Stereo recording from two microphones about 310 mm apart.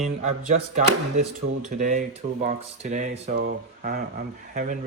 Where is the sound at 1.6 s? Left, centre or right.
Right.